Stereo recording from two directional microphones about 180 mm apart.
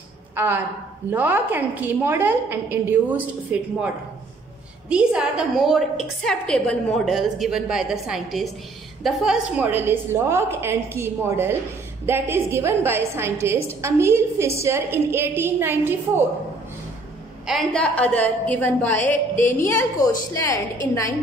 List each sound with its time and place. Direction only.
0.4 s a woman's voice: 10° right (ahead or behind)
4.8 s a woman's voice: 5° right (ahead or behind)
17.5 s a woman's voice: 5° left (ahead or behind)